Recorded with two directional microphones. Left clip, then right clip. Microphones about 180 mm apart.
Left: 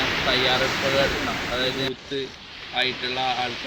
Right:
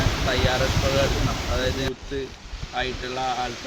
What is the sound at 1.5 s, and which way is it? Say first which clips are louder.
Speech: left 1 dB; 5° right (ahead or behind).